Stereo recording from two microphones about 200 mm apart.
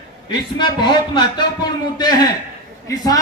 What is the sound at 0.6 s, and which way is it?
A man's voice, 20° left (ahead or behind).